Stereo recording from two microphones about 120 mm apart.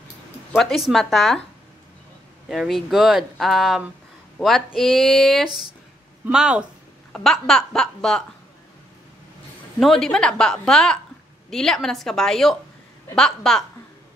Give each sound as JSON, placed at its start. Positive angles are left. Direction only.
{"t": 0.6, "sound": "speech", "side_deg": 0}
{"t": 2.4, "sound": "speech", "side_deg": -5}
{"t": 7.1, "sound": "speech", "side_deg": 5}
{"t": 9.8, "sound": "speech", "side_deg": 5}